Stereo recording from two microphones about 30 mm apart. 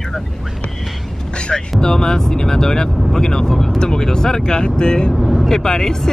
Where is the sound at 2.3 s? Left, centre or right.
Left.